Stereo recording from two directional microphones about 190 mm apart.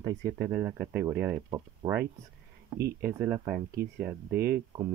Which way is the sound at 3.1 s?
10° right (ahead or behind).